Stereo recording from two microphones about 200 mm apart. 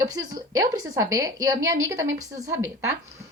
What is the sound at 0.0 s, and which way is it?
A woman's voice, 20° right (ahead or behind).